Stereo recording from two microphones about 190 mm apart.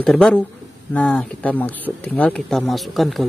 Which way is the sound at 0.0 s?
5° left (ahead or behind).